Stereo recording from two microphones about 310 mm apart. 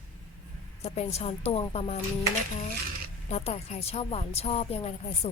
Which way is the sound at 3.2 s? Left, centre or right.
Centre.